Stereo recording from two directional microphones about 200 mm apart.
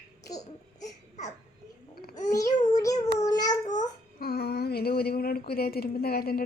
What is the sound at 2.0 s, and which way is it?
Babbling, 35° left (ahead or behind).